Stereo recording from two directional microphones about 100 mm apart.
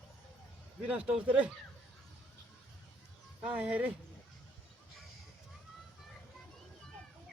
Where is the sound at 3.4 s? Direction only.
10° right (ahead or behind).